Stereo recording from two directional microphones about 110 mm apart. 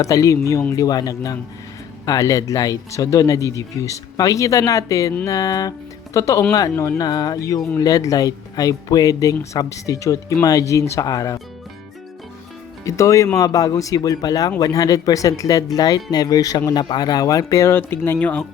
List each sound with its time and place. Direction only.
0.0 s speech: 30° left (ahead or behind)
12.8 s speech: 30° left (ahead or behind)